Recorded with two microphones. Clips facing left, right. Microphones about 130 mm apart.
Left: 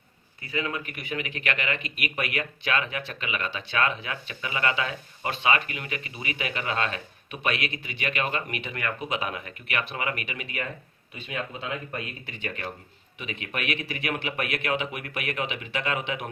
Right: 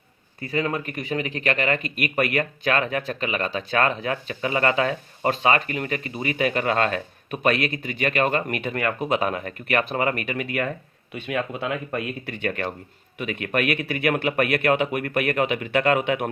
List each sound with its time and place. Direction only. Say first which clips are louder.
0.4 s speech: right 6 dB; 40° right (ahead or behind)
11.1 s speech: right 7 dB; 70° right (ahead or behind)